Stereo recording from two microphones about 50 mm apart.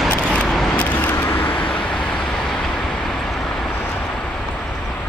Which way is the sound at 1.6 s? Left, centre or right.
Centre.